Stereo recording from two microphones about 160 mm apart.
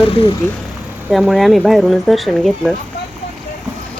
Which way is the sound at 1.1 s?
Centre (ahead or behind).